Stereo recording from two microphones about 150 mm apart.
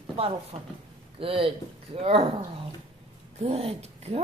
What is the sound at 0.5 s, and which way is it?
Speech, 40° right (ahead or behind).